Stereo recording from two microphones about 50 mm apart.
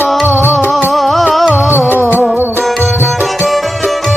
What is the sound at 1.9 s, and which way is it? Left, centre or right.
Music, right.